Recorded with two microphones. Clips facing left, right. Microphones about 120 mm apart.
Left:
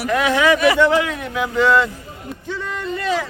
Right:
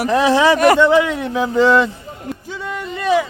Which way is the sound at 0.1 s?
30° right (ahead or behind).